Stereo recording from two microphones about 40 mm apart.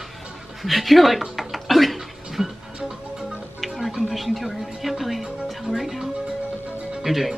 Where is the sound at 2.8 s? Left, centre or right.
Centre.